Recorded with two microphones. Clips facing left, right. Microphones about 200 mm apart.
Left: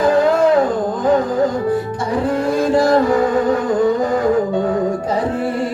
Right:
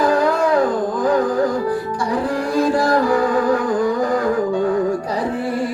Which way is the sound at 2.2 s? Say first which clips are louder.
Left 2 dB; 25° left (ahead or behind).